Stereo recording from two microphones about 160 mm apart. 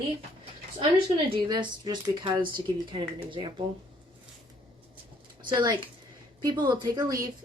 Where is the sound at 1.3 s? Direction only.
30° right (ahead or behind).